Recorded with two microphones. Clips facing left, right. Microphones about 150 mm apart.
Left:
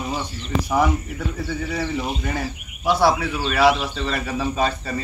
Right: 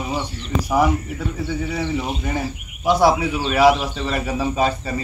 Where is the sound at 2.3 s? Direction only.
15° right (ahead or behind).